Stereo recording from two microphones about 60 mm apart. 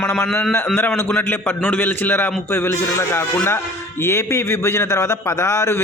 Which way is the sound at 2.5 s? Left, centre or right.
Left.